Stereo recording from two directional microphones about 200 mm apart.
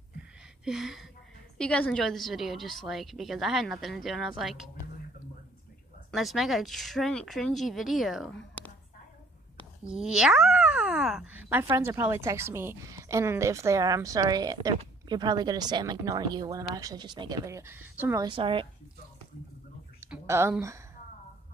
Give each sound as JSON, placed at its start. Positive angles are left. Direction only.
{"t": 0.7, "sound": "a woman's voice", "side_deg": 0}
{"t": 6.1, "sound": "a woman's voice", "side_deg": 0}
{"t": 8.6, "sound": "a sound", "side_deg": 5}
{"t": 9.8, "sound": "a woman's voice", "side_deg": -5}
{"t": 18.2, "sound": "a woman's voice", "side_deg": -25}
{"t": 20.0, "sound": "a sound", "side_deg": -15}